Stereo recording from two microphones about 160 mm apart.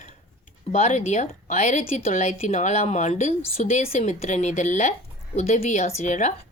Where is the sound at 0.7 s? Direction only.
45° left (ahead or behind).